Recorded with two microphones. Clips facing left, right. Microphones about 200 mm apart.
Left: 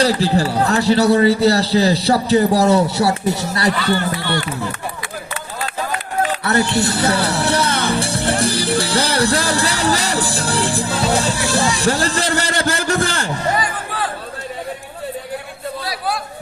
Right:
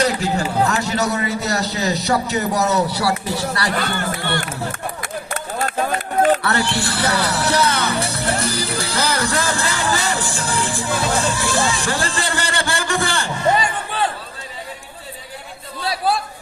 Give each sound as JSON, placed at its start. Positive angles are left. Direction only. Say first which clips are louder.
{"t": 0.0, "sound": "a man's voice", "louder": "left 4 dB", "side_deg": 35}
{"t": 3.8, "sound": "speech", "louder": "left 4 dB", "side_deg": -50}
{"t": 6.4, "sound": "speech", "louder": "left 4 dB", "side_deg": 25}
{"t": 8.1, "sound": "music", "louder": "left 4 dB", "side_deg": 30}
{"t": 13.5, "sound": "crowd", "louder": "right 6 dB", "side_deg": -25}
{"t": 15.8, "sound": "chatter", "louder": "right 5 dB", "side_deg": -25}